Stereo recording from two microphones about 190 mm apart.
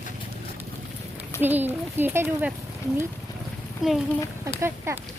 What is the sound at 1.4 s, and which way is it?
Speech, 10° right (ahead or behind).